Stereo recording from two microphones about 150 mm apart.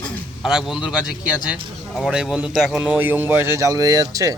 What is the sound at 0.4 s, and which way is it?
A man's voice, 5° right (ahead or behind).